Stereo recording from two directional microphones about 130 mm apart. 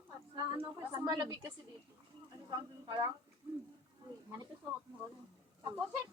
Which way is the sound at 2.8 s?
35° right (ahead or behind).